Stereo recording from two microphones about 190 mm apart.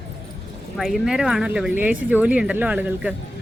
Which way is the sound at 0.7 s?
Centre (ahead or behind).